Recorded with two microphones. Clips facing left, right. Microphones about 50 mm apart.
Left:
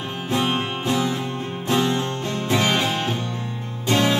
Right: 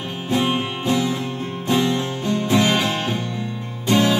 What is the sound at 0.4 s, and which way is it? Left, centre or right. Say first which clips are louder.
Music: right 1 dB; centre.